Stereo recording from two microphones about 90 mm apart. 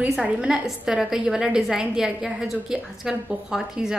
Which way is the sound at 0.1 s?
10° right (ahead or behind).